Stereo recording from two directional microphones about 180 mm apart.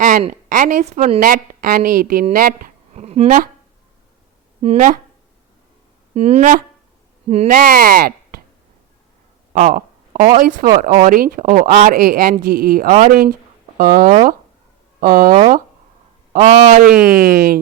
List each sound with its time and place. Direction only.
0.0 s speech: 50° right (ahead or behind)
4.6 s speech: 40° right (ahead or behind)
6.1 s speech: 40° right (ahead or behind); by 8.4 s 55° right (ahead or behind)
9.5 s a sound: 50° right (ahead or behind)
10.3 s speech: 50° right (ahead or behind)
16.4 s speech: 40° right (ahead or behind)
16.9 s speech: 5° right (ahead or behind)
17.2 s speech: 55° right (ahead or behind)